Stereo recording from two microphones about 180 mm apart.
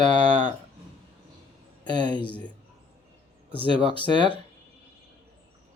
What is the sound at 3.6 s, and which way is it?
Speech, 30° right (ahead or behind).